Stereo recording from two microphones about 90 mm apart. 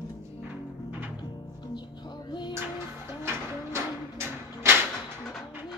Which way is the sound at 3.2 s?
25° right (ahead or behind).